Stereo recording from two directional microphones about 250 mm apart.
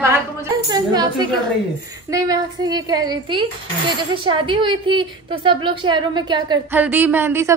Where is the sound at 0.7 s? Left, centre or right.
Centre.